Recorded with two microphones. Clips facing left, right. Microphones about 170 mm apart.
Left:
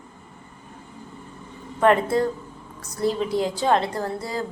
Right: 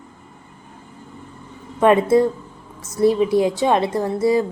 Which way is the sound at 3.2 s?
20° right (ahead or behind).